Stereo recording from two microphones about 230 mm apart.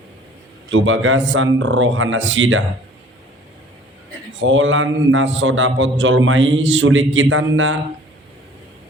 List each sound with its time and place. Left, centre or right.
0.7 s a man's voice: right
4.4 s a man's voice: right